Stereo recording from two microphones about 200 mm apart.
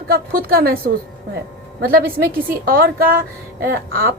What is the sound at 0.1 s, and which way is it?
Speech, 50° right (ahead or behind).